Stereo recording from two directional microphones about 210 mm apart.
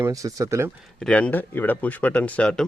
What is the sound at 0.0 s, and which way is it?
Speech, 15° right (ahead or behind).